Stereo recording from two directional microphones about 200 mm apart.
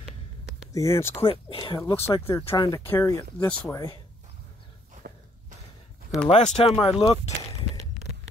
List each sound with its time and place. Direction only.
0.7 s speech: 15° left (ahead or behind)
1.2 s speech: 25° left (ahead or behind)
5.0 s a sound: 45° right (ahead or behind)
6.2 s speech: 35° left (ahead or behind)